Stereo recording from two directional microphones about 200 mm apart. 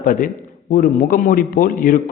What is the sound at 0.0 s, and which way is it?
A man's voice, 45° left (ahead or behind).